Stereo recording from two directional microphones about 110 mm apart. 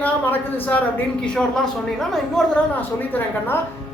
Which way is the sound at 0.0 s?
15° left (ahead or behind).